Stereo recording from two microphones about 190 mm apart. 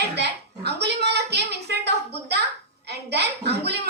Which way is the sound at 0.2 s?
60° right (ahead or behind).